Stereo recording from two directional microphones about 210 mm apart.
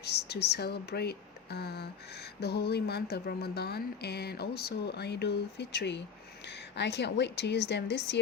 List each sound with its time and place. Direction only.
0.0 s a woman's voice: 50° left (ahead or behind)